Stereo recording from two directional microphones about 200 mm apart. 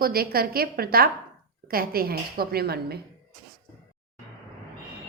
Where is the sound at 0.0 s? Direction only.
50° right (ahead or behind).